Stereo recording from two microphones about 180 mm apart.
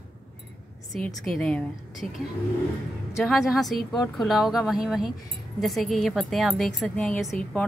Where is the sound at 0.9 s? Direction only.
5° left (ahead or behind).